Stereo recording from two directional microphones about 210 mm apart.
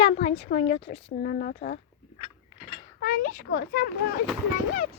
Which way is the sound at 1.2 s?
45° left (ahead or behind).